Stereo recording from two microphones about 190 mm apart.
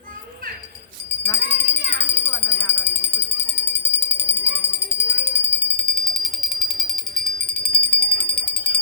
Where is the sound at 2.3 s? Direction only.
10° left (ahead or behind).